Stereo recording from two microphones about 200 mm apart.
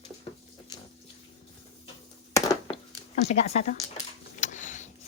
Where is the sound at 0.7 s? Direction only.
20° left (ahead or behind).